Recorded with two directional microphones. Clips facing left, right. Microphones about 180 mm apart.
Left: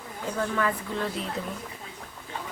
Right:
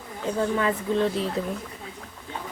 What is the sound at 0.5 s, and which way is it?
Speech, 20° right (ahead or behind).